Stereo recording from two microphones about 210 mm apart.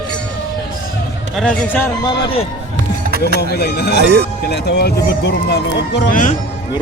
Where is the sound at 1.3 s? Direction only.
5° left (ahead or behind).